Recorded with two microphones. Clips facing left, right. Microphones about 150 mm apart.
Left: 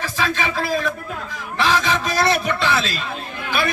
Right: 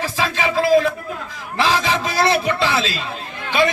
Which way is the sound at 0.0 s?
30° right (ahead or behind).